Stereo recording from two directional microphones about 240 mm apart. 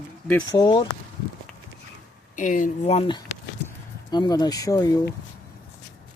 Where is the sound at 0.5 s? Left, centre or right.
Centre.